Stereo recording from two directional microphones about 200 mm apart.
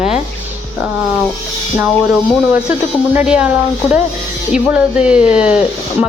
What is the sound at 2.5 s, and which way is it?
Speech, 5° right (ahead or behind).